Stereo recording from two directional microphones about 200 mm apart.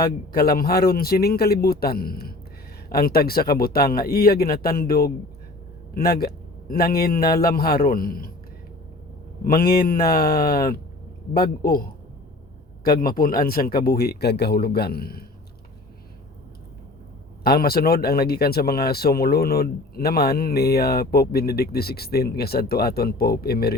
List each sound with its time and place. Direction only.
0.0 s speech: 50° left (ahead or behind)
9.4 s speech: 45° left (ahead or behind)
17.4 s speech: 50° left (ahead or behind)